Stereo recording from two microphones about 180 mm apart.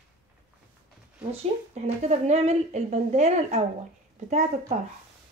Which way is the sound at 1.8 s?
40° right (ahead or behind).